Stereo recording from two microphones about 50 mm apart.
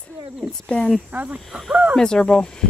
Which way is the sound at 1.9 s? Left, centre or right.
Centre.